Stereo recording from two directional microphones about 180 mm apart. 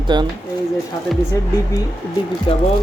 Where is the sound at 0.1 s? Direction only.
25° right (ahead or behind).